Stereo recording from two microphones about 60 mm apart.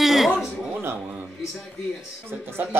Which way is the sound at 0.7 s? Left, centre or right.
Right.